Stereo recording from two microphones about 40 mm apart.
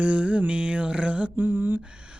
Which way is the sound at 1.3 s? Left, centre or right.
Right.